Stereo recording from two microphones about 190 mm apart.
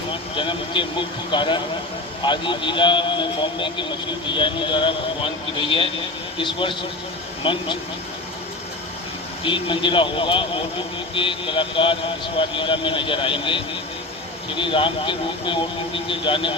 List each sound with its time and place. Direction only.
0.3 s a man's voice: 25° left (ahead or behind)
9.4 s a man's voice: 25° left (ahead or behind)